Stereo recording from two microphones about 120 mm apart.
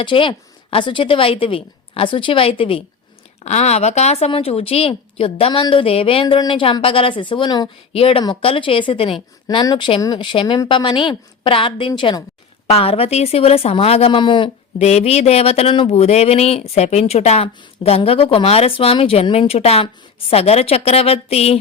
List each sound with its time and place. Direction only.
0.0 s speech: 45° left (ahead or behind)
3.4 s speech: 65° left (ahead or behind); by 7.7 s 35° left (ahead or behind)
7.9 s speech: 50° left (ahead or behind)
10.4 s a woman's voice: 30° left (ahead or behind)
10.7 s speech: 40° left (ahead or behind)
12.6 s a woman's voice: 55° left (ahead or behind)
14.8 s a woman's voice: 65° left (ahead or behind)